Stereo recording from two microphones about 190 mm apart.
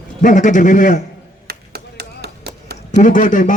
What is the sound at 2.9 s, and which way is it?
Speech, 40° left (ahead or behind).